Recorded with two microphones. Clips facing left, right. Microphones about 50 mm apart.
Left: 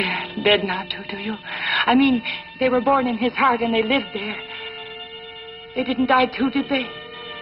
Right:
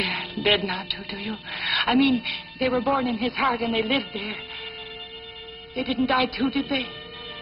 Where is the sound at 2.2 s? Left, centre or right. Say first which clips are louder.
Left 4 dB; left.